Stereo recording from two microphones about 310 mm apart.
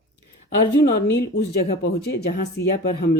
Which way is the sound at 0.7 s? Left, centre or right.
Left.